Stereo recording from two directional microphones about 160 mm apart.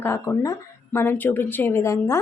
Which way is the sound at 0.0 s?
20° left (ahead or behind).